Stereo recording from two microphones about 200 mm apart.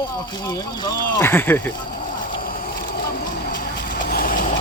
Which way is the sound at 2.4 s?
45° left (ahead or behind).